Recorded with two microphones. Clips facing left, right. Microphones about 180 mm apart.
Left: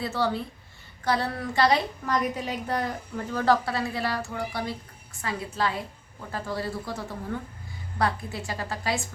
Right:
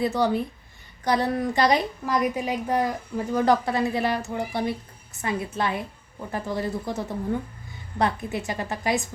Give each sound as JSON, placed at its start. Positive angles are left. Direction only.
{"t": 0.0, "sound": "a woman's voice", "side_deg": -15}